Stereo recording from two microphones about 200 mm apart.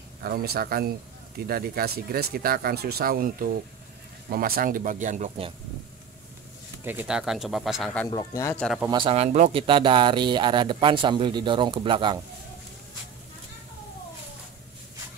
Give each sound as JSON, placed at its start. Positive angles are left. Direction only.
{"t": 0.2, "sound": "speech", "side_deg": -50}
{"t": 6.8, "sound": "speech", "side_deg": -10}
{"t": 8.1, "sound": "speech", "side_deg": 20}
{"t": 8.5, "sound": "speech", "side_deg": 0}
{"t": 8.9, "sound": "speech", "side_deg": -30}